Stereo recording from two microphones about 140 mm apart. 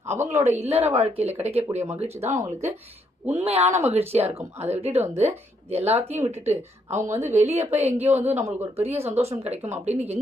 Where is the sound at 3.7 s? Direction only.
20° right (ahead or behind).